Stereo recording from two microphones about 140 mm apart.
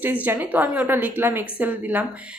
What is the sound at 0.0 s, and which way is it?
A woman's voice, 10° right (ahead or behind).